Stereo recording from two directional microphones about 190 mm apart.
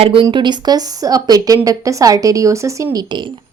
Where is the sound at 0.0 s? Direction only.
30° right (ahead or behind).